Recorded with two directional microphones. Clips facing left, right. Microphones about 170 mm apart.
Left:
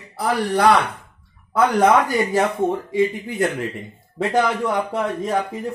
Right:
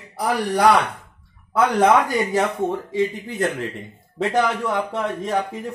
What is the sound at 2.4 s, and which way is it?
Speech, 10° left (ahead or behind).